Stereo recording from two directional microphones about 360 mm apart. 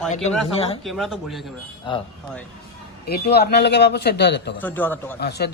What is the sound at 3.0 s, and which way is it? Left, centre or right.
Speech, left.